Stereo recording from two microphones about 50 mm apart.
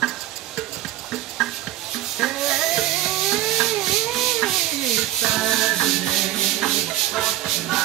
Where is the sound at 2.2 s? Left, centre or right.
Centre.